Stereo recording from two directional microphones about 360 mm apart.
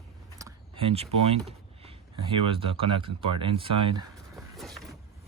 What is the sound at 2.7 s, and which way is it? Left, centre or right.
Speech, centre.